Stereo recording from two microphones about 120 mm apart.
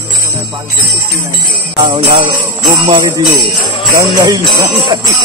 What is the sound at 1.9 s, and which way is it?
Jingle bell, 50° right (ahead or behind).